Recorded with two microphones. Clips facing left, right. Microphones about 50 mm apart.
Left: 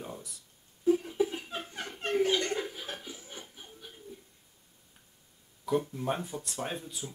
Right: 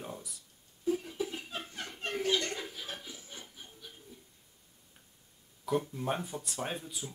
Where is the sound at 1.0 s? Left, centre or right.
Centre.